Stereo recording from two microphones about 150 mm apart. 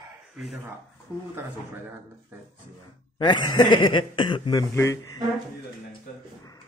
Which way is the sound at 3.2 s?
30° left (ahead or behind).